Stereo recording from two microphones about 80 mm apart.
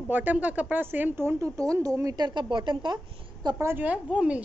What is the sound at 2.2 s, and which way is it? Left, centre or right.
A woman's voice, right.